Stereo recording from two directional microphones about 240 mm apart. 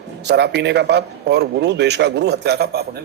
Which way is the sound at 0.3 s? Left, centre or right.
Right.